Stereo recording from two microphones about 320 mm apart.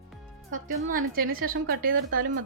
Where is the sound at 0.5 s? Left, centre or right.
Right.